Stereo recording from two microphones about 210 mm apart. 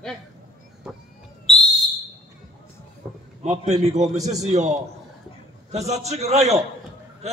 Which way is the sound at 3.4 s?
30° right (ahead or behind).